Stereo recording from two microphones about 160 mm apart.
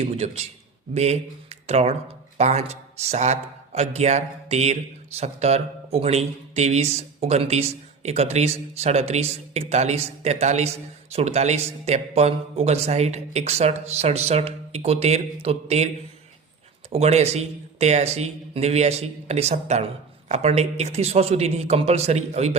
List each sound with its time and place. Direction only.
0.0 s speech: 40° right (ahead or behind)
16.9 s speech: 40° right (ahead or behind)